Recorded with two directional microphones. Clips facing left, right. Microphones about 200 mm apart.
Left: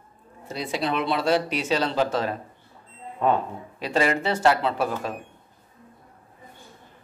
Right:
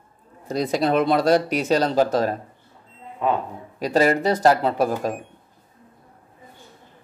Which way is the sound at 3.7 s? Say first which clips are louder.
Right 5 dB; 40° right (ahead or behind).